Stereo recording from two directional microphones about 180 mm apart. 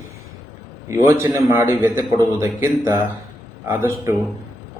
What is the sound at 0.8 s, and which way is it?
A man's voice, 15° right (ahead or behind).